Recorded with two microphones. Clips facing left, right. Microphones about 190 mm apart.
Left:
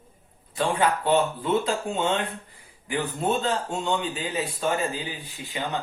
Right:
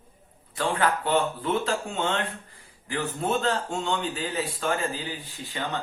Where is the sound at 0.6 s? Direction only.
20° left (ahead or behind).